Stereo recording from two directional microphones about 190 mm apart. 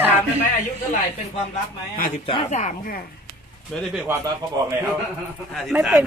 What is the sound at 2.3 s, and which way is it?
Speech, 25° left (ahead or behind).